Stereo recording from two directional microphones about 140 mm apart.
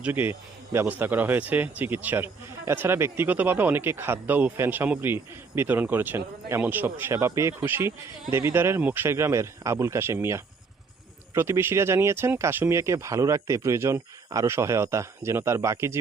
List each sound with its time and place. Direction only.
0.0 s speech: 15° right (ahead or behind)